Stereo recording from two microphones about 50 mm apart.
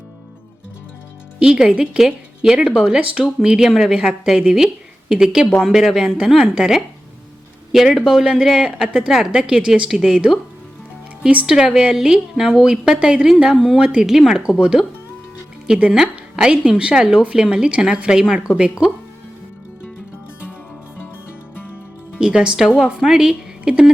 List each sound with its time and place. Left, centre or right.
1.4 s a woman's voice: centre
7.9 s speech: centre
11.2 s a woman's voice: right
22.2 s a woman's voice: centre
23.0 s speech: centre
23.6 s a woman's voice: centre